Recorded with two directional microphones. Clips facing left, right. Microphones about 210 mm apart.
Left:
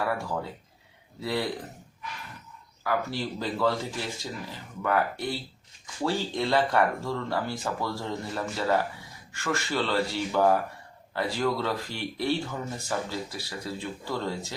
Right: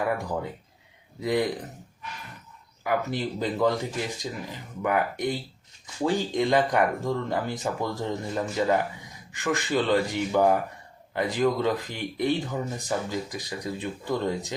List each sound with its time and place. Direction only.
1.2 s speech: 15° right (ahead or behind)
2.8 s speech: 20° right (ahead or behind)